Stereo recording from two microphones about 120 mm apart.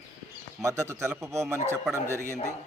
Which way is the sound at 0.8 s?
25° right (ahead or behind).